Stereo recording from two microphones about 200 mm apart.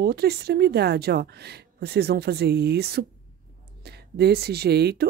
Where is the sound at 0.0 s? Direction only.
55° right (ahead or behind).